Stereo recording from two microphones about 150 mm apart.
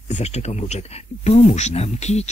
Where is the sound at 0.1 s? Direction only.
45° left (ahead or behind).